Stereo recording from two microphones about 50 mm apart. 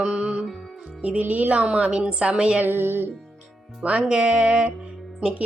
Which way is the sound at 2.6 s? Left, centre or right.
Right.